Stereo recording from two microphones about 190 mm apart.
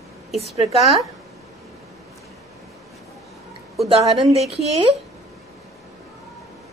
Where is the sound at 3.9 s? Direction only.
25° right (ahead or behind).